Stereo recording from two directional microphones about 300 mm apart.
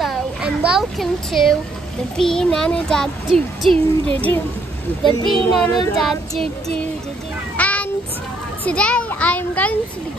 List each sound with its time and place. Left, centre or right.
0.0 s a sound: centre
2.1 s a child's voice: centre
5.0 s a child's voice: centre
5.6 s a child's voice: centre
7.5 s a sound: centre
8.6 s a child's voice: centre